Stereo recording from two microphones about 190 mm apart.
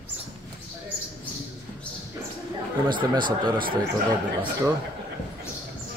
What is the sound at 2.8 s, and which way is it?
Speech, 25° right (ahead or behind).